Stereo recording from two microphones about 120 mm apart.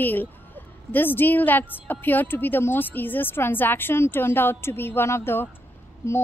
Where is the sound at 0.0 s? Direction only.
15° left (ahead or behind).